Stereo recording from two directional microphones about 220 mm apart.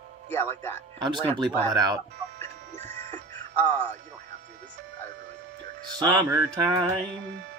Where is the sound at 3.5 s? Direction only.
10° left (ahead or behind).